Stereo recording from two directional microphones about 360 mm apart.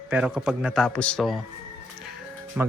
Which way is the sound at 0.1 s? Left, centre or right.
Centre.